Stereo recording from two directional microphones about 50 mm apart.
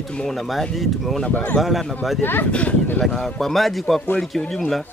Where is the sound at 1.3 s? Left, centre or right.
Left.